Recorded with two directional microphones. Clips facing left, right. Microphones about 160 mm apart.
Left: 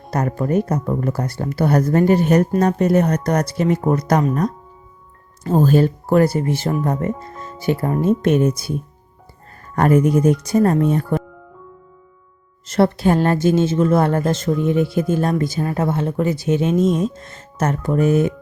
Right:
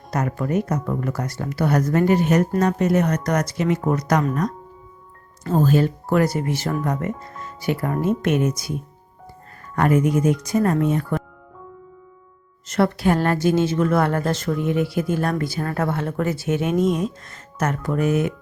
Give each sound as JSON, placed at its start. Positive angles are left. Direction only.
{"t": 0.1, "sound": "speech", "side_deg": 35}
{"t": 5.4, "sound": "speech", "side_deg": 20}
{"t": 5.6, "sound": "speech", "side_deg": 40}
{"t": 9.7, "sound": "speech", "side_deg": 40}
{"t": 12.6, "sound": "speech", "side_deg": 30}